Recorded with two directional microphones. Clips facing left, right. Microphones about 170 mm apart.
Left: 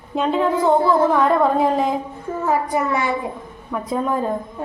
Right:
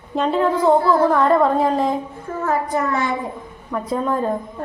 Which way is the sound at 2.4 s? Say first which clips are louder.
Left 1 dB; 10° left (ahead or behind).